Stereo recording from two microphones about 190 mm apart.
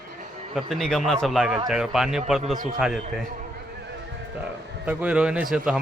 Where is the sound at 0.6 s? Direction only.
Centre (ahead or behind).